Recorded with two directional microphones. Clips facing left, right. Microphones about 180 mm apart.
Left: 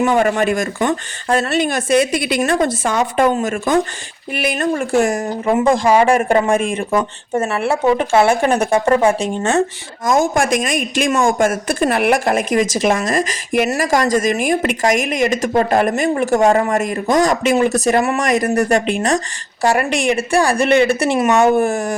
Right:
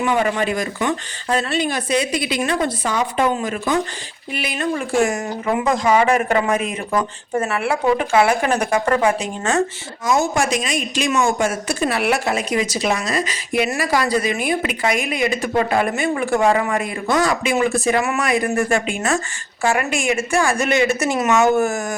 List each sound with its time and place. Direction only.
0.0 s a woman's voice: 45° left (ahead or behind)
6.9 s speech: 25° left (ahead or behind)
10.0 s a woman's voice: 50° left (ahead or behind); by 21.9 s 30° left (ahead or behind)